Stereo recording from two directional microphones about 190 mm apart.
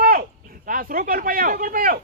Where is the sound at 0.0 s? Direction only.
50° right (ahead or behind).